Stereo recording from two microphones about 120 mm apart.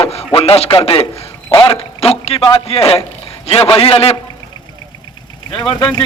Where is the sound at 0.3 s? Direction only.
50° left (ahead or behind).